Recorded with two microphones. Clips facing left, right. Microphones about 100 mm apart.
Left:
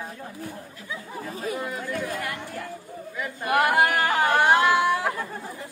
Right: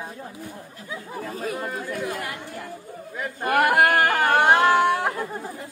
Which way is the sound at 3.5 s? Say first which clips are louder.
Right 2 dB; 65° right (ahead or behind).